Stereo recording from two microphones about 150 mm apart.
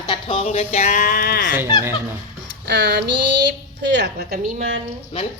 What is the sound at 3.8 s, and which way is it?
Speech, 90° right.